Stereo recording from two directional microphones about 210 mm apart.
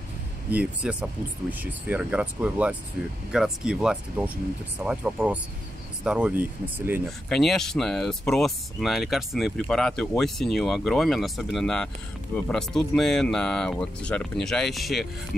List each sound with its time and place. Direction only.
0.5 s speech: 5° right (ahead or behind)
7.1 s speech: centre (ahead or behind)